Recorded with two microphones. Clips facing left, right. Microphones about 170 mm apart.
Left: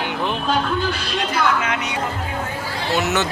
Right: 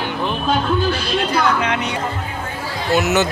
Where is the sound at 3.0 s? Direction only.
5° right (ahead or behind).